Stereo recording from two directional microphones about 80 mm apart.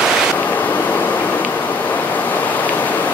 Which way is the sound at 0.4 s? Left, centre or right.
Left.